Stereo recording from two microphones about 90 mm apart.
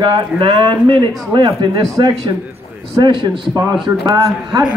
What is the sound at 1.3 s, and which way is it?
Speech, 60° right (ahead or behind).